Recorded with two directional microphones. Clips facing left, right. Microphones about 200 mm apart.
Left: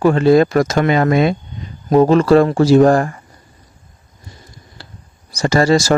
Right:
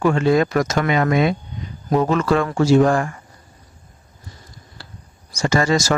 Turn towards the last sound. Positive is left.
turn(degrees=30)  # may be behind; listen again after turning